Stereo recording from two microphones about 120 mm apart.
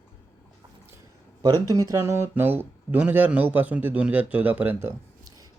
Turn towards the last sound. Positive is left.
turn(degrees=-15)  # may be behind; listen again after turning